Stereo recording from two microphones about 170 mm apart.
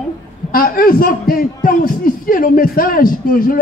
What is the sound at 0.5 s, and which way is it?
A man's voice, 60° left (ahead or behind).